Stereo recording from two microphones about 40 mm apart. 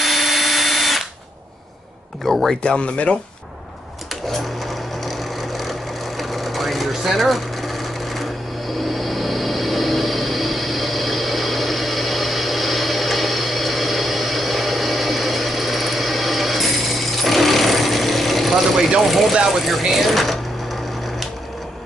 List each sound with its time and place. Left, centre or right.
0.0 s drill: centre
2.2 s speech: centre
2.6 s speech: left
4.4 s vehicle: centre
19.0 s speech: centre